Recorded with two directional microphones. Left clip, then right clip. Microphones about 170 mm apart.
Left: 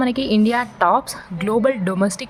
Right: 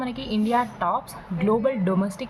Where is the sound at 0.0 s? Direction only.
45° left (ahead or behind).